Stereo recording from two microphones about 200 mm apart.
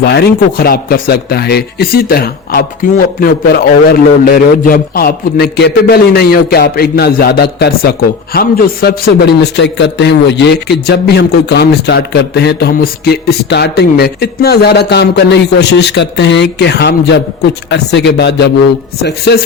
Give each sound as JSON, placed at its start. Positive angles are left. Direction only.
{"t": 0.0, "sound": "a man's voice", "side_deg": 55}